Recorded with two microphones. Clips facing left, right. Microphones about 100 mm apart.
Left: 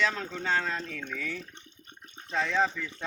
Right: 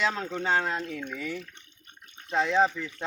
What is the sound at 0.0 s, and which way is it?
Speech, 20° right (ahead or behind).